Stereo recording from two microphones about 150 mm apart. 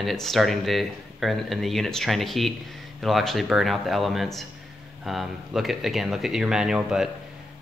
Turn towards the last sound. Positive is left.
turn(degrees=-5)  # may be behind; listen again after turning